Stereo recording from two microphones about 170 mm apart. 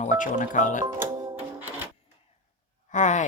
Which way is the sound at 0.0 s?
45° left (ahead or behind).